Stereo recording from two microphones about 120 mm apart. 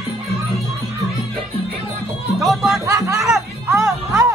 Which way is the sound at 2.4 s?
Centre (ahead or behind).